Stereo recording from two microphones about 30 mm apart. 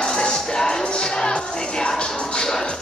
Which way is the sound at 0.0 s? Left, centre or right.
Left.